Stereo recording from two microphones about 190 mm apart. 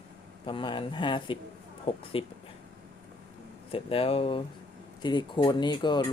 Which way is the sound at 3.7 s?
30° left (ahead or behind).